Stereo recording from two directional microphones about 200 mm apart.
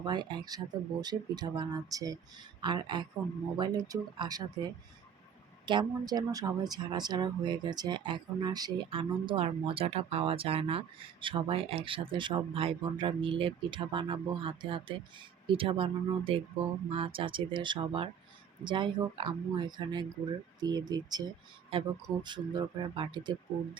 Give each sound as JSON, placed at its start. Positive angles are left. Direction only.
{"t": 0.0, "sound": "speech", "side_deg": -20}